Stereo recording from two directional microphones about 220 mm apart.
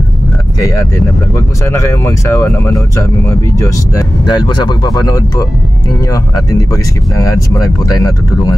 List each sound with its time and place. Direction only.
1.3 s speech: 10° left (ahead or behind)
6.5 s speech: 15° left (ahead or behind)